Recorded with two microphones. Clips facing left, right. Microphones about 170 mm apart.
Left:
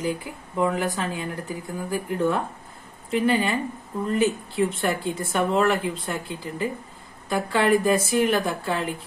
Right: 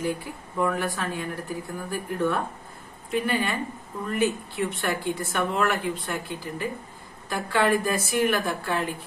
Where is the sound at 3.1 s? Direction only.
25° left (ahead or behind).